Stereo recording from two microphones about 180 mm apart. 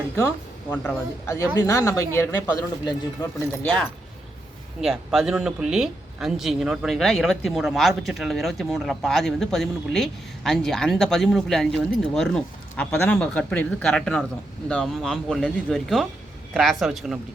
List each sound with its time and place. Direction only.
0.2 s speech: 15° left (ahead or behind)
3.2 s speech: 25° left (ahead or behind)
3.6 s speech: 5° left (ahead or behind)